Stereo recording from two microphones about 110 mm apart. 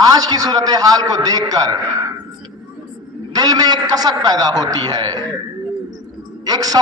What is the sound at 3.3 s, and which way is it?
A man's voice, 35° right (ahead or behind).